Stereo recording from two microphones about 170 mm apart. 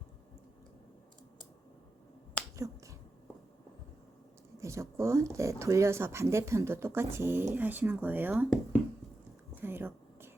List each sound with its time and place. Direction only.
2.4 s finger snapping: 10° left (ahead or behind)
4.6 s speech: 15° right (ahead or behind)
9.6 s a sound: 10° right (ahead or behind)